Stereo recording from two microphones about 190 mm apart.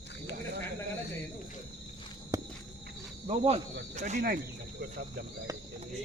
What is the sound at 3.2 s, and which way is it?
Speech, 35° right (ahead or behind).